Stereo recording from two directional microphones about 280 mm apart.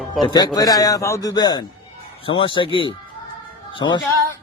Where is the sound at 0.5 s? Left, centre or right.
Centre.